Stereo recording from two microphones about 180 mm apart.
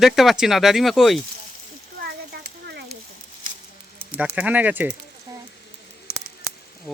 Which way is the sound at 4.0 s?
10° right (ahead or behind).